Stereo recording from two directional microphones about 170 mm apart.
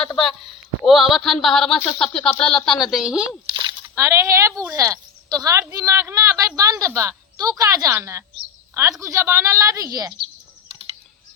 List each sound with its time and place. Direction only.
0.9 s speech: centre (ahead or behind)
3.5 s a sound: 30° right (ahead or behind)
3.9 s a woman's voice: 15° right (ahead or behind)